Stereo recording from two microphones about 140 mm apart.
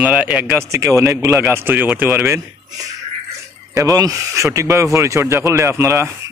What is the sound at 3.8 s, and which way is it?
Speech, 25° right (ahead or behind).